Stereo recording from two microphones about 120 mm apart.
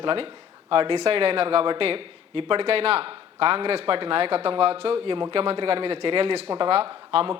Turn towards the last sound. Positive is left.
turn(degrees=-50)  # may be behind; listen again after turning